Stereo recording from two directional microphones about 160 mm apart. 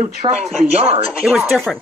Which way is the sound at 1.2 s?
Centre (ahead or behind).